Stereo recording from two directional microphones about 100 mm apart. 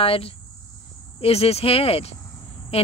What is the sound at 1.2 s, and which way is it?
Speech, 90° left.